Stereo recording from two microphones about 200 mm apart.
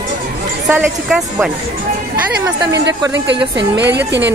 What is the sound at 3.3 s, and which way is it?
Speech, 60° right (ahead or behind).